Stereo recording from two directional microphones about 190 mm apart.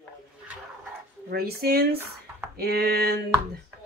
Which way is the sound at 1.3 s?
55° right (ahead or behind).